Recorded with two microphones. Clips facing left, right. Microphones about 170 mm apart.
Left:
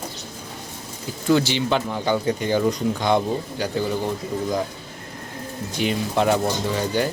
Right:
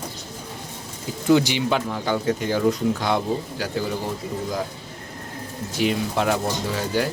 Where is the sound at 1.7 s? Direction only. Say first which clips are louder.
Left 3 dB; centre (ahead or behind).